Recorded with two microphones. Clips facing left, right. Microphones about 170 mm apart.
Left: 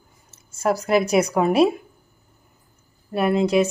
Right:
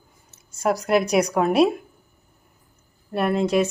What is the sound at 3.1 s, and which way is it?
Speech, centre (ahead or behind).